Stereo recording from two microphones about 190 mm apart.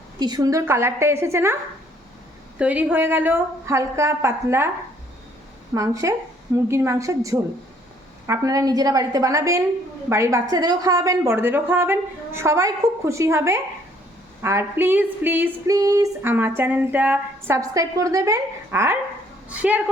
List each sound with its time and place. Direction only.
0.2 s speech: 20° right (ahead or behind)
2.6 s speech: 10° right (ahead or behind)
5.7 s speech: 15° right (ahead or behind)